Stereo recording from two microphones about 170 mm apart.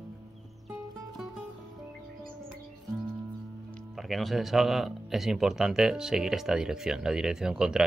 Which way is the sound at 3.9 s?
Centre (ahead or behind).